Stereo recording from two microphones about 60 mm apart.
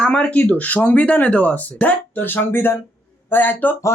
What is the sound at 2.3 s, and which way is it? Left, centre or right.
A man's voice, left.